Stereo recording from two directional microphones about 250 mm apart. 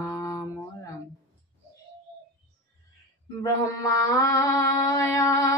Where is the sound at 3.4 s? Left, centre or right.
Centre.